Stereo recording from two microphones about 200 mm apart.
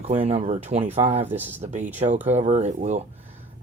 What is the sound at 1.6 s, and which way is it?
Speech, 35° right (ahead or behind).